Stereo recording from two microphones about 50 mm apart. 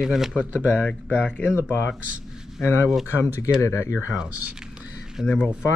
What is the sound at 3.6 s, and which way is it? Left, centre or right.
Speech, left.